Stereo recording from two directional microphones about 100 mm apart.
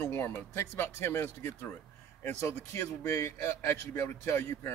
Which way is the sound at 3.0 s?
30° left (ahead or behind).